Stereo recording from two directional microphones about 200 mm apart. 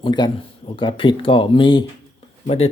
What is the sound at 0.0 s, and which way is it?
Speech, 20° left (ahead or behind).